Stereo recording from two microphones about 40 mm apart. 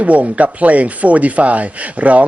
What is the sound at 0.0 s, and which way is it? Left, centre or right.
Speech, right.